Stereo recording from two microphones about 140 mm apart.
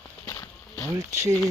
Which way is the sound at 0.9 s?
20° right (ahead or behind).